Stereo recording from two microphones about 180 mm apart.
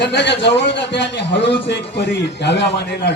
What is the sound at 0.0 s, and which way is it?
A man's voice, 75° left (ahead or behind).